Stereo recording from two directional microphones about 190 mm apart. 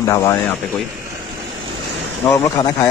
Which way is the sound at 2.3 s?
15° left (ahead or behind).